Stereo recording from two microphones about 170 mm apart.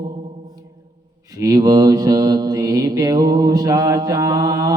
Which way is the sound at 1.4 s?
20° right (ahead or behind).